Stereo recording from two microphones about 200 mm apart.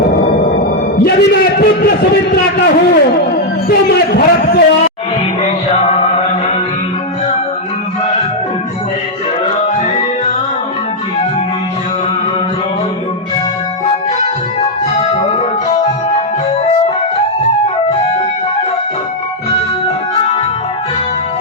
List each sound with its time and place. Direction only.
1.0 s a man's voice: 50° left (ahead or behind)
5.4 s music: 35° left (ahead or behind)
13.8 s music: 30° left (ahead or behind)